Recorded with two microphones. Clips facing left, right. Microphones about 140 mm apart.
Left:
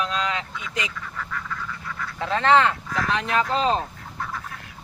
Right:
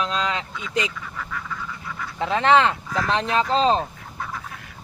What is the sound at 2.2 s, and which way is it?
Speech, 20° right (ahead or behind).